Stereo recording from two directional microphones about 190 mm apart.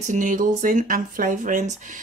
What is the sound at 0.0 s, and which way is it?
Speech, 40° right (ahead or behind).